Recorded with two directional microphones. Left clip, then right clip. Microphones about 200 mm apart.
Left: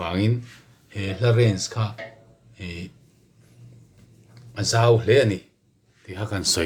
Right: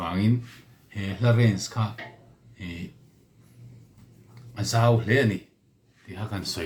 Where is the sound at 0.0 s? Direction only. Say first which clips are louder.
Left 4 dB; 45° left (ahead or behind).